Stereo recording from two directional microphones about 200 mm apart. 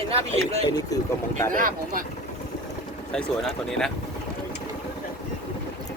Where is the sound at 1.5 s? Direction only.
45° right (ahead or behind).